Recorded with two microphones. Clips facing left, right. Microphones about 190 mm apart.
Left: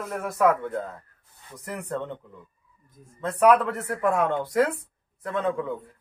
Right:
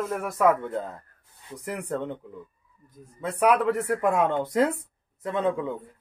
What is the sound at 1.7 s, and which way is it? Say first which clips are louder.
Speech: right 2 dB; 10° right (ahead or behind).